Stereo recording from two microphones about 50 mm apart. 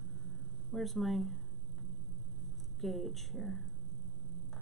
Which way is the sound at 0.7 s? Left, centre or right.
Centre.